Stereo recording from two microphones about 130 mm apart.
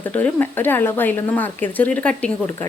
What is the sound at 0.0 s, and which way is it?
Speech, 10° left (ahead or behind).